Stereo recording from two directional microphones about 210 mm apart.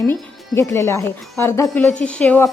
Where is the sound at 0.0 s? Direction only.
10° left (ahead or behind).